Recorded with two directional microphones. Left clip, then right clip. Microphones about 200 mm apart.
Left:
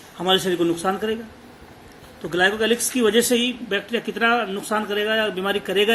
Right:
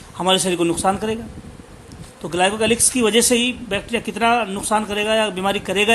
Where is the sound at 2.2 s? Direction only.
40° right (ahead or behind).